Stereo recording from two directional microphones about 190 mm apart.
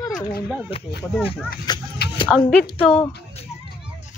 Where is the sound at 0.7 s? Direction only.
30° left (ahead or behind).